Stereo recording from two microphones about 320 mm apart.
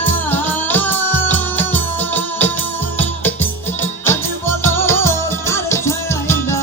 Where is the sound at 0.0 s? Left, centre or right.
Centre.